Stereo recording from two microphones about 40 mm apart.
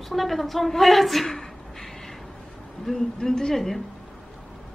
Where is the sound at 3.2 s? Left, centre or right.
Centre.